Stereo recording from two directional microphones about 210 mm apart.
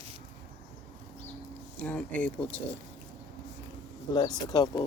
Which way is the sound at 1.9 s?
5° left (ahead or behind).